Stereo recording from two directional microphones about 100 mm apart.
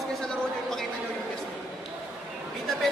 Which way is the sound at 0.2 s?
5° left (ahead or behind).